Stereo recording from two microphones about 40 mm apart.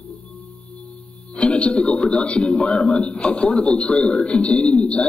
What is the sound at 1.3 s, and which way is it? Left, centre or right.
A man's voice, left.